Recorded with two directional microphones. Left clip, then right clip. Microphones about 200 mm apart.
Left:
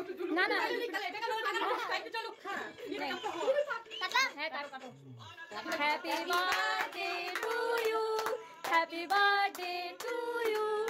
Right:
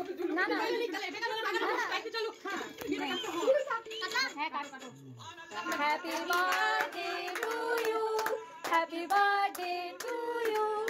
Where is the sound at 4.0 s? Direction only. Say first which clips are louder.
Left 4 dB; 55° left (ahead or behind).